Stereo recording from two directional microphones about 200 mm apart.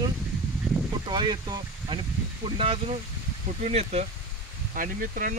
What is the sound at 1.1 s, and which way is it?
Speech, 20° right (ahead or behind).